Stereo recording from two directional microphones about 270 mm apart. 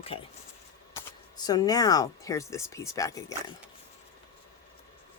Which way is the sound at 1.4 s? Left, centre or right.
Centre.